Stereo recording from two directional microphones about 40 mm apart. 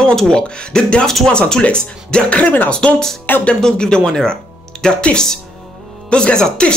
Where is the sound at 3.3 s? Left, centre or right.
Left.